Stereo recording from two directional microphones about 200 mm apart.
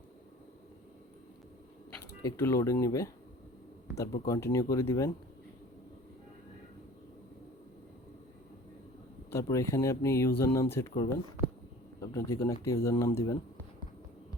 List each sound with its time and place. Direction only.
2.0 s speech: 15° left (ahead or behind)
9.3 s speech: 15° left (ahead or behind)